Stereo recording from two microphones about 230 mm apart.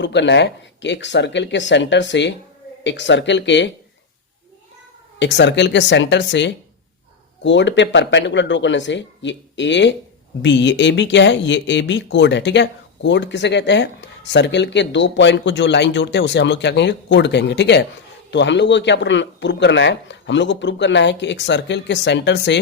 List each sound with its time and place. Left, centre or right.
0.0 s speech: left
5.2 s speech: left